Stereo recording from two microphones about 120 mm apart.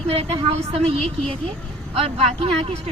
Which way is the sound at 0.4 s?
55° right (ahead or behind).